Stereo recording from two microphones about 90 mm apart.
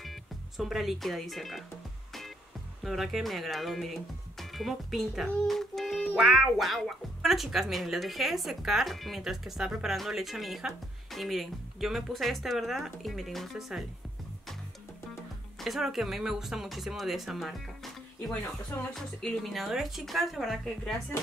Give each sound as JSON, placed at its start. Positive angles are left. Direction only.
{"t": 0.0, "sound": "speech", "side_deg": 0}
{"t": 2.8, "sound": "speech", "side_deg": 0}
{"t": 15.6, "sound": "speech", "side_deg": 0}
{"t": 18.9, "sound": "speech", "side_deg": 0}
{"t": 21.1, "sound": "speech", "side_deg": 30}